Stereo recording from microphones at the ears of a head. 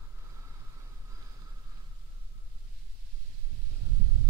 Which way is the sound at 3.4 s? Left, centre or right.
Right.